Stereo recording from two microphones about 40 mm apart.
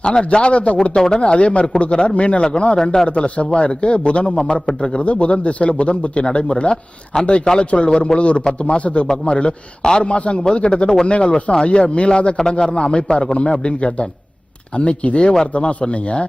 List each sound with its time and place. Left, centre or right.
0.0 s a man's voice: centre
0.9 s a man's voice: centre
1.2 s speech: left
2.7 s a man's voice: centre
3.3 s speech: left
12.4 s speech: centre